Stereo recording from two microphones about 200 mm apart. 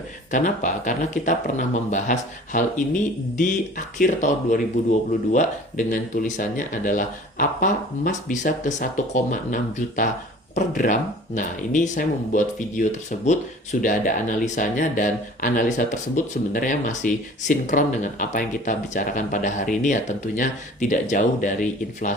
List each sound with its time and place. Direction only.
0.3 s speech: 40° left (ahead or behind)